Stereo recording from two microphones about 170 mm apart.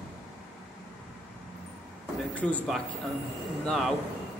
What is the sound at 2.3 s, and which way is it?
Speech, 10° left (ahead or behind).